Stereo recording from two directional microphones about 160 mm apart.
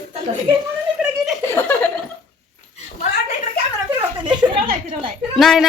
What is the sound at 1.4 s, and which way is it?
Chuckle, 15° left (ahead or behind).